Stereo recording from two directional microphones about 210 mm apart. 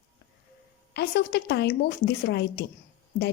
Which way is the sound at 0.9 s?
50° left (ahead or behind).